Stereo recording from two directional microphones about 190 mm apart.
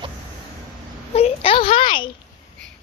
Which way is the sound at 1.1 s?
30° left (ahead or behind).